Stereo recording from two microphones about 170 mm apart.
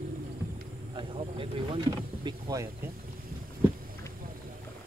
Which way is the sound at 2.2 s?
25° right (ahead or behind).